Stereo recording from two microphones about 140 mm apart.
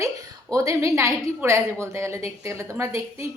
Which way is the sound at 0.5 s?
25° right (ahead or behind).